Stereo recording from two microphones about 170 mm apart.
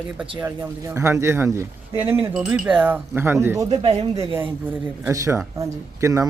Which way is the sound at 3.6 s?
30° right (ahead or behind).